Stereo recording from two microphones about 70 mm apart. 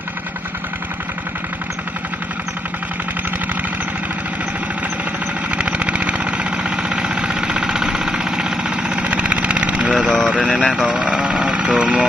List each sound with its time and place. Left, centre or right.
5.5 s vehicle: centre
10.2 s a sound: centre
10.7 s vehicle: centre
11.8 s speech: centre